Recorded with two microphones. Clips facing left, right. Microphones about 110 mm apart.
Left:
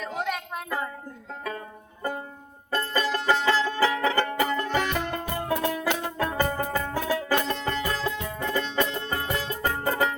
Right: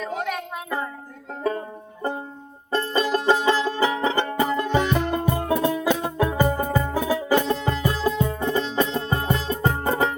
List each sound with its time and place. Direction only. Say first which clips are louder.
0.0 s music: right 3 dB; centre (ahead or behind)
1.5 s music: right 10 dB; 30° right (ahead or behind); by 7.8 s 10° right (ahead or behind)
7.8 s music: right 6 dB; 20° right (ahead or behind)